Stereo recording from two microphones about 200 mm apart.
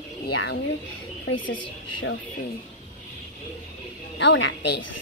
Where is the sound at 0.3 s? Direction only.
60° left (ahead or behind).